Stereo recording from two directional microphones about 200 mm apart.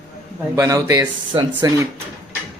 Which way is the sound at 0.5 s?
15° right (ahead or behind).